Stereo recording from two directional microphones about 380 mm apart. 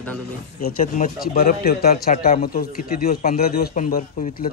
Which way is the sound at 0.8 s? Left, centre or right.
Left.